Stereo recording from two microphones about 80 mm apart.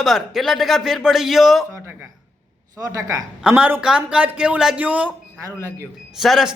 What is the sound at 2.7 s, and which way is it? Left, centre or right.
Speech, right.